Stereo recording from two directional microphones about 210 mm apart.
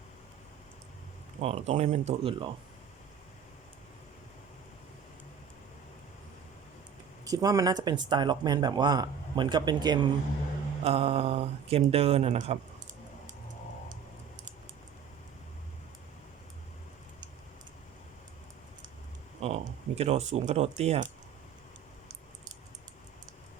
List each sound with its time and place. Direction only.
1.4 s speech: 30° right (ahead or behind)
7.3 s speech: 15° right (ahead or behind)
19.4 s speech: 30° right (ahead or behind)